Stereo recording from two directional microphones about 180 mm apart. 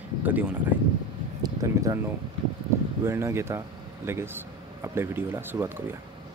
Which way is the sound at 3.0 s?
15° right (ahead or behind).